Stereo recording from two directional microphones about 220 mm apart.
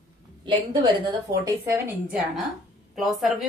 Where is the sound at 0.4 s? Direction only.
20° right (ahead or behind).